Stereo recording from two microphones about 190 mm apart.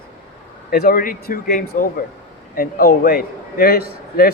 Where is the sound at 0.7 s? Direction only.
50° left (ahead or behind).